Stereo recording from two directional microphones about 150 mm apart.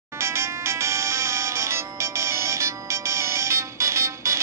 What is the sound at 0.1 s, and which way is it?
Music, 15° right (ahead or behind).